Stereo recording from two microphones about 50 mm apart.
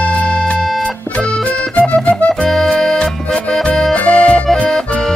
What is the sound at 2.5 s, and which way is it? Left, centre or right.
Music, centre.